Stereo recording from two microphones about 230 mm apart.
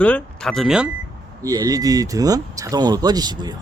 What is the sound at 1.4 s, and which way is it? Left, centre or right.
Speech, centre.